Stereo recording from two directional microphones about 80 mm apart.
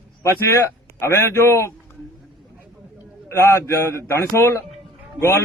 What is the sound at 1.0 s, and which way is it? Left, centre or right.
Speech, left.